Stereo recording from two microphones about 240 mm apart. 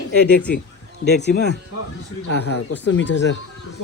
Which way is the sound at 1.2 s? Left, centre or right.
Left.